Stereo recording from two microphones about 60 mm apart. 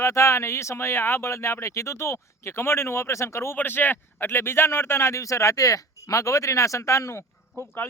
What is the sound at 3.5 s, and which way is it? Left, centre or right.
Speech, left.